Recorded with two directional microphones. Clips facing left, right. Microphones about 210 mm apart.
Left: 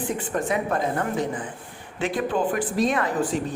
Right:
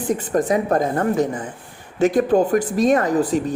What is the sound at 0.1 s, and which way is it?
A woman's voice, 40° right (ahead or behind).